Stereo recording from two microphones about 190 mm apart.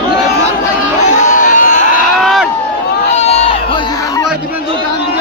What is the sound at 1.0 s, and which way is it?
Crowd, 40° left (ahead or behind).